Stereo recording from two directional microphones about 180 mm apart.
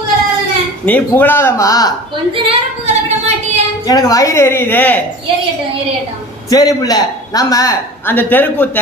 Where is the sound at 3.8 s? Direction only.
20° left (ahead or behind).